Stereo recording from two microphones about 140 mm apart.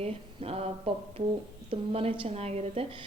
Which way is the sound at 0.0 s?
45° right (ahead or behind).